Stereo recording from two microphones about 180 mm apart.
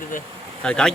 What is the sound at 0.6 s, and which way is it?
Speech, 5° left (ahead or behind).